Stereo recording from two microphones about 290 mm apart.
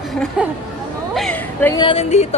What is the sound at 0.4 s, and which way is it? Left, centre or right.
Speech, centre.